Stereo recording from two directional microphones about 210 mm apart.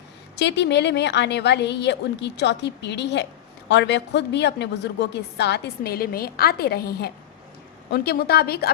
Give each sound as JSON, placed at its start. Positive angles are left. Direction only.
{"t": 0.3, "sound": "a woman's voice", "side_deg": 55}